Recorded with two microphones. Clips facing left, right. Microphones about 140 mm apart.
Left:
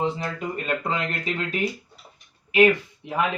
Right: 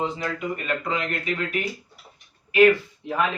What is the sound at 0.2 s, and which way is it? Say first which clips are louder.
A man's voice: right 1 dB; 35° left (ahead or behind).